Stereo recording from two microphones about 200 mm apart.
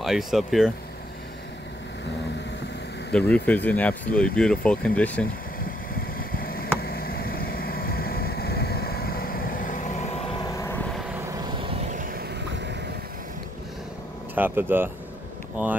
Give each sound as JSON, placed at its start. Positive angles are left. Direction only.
{"t": 0.0, "sound": "speech", "side_deg": 0}
{"t": 3.1, "sound": "speech", "side_deg": 5}
{"t": 6.1, "sound": "a sound", "side_deg": 45}
{"t": 10.4, "sound": "vehicle", "side_deg": 15}
{"t": 11.6, "sound": "vehicle", "side_deg": -40}
{"t": 14.3, "sound": "speech", "side_deg": -10}